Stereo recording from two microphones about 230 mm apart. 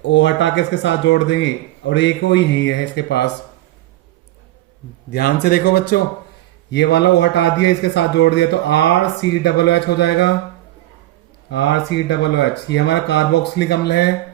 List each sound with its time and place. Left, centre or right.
0.0 s speech: left
5.1 s speech: left
11.4 s speech: left